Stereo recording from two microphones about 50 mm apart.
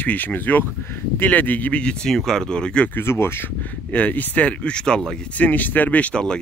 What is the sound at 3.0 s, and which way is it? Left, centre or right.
Speech, left.